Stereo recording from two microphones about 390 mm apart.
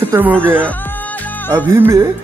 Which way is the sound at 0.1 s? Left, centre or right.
Centre.